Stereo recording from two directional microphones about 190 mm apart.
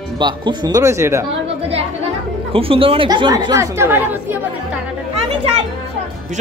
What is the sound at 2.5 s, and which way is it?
A child's voice, 30° right (ahead or behind).